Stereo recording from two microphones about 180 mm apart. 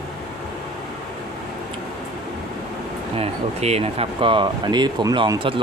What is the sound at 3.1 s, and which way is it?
Speech, 35° right (ahead or behind).